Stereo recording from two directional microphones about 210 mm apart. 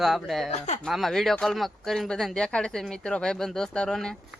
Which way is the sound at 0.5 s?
30° left (ahead or behind).